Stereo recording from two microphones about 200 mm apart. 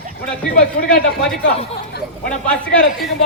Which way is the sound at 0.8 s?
50° left (ahead or behind).